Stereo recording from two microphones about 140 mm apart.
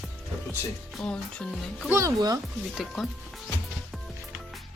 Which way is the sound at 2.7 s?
Centre (ahead or behind).